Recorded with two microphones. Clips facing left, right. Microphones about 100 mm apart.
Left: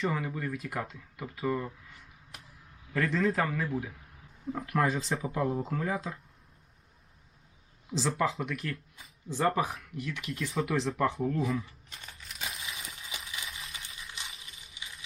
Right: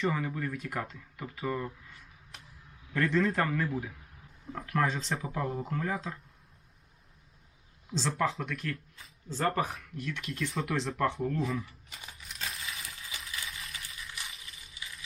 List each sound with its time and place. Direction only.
0.0 s speech: centre (ahead or behind)
7.9 s speech: 5° left (ahead or behind)
11.9 s crumpling: 10° right (ahead or behind)
12.6 s a sound: 20° left (ahead or behind)